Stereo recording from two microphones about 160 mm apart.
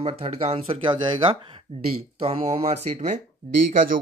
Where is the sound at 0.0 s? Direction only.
40° right (ahead or behind).